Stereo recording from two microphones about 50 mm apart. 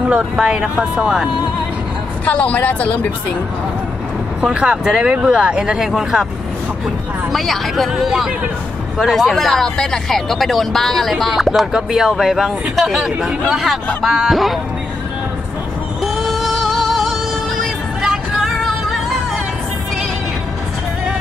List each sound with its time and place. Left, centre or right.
0.1 s speech: centre
2.2 s speech: left
4.4 s speech: centre
7.3 s speech: centre
7.9 s speech: centre
16.0 s music: centre